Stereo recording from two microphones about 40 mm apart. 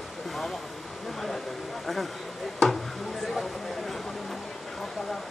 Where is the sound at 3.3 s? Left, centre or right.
Centre.